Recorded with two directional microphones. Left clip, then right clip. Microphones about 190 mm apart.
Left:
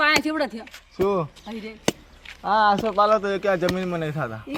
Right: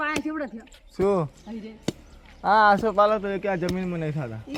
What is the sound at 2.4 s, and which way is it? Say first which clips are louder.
Speech: right 1 dB; 55° right (ahead or behind).